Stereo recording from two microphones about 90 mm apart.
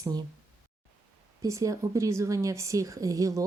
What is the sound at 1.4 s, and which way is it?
A woman's voice, 40° right (ahead or behind).